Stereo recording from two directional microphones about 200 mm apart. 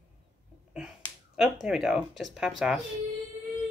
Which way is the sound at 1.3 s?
Centre (ahead or behind).